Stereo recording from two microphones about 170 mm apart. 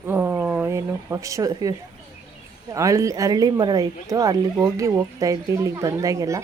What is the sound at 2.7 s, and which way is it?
Speech, 20° right (ahead or behind).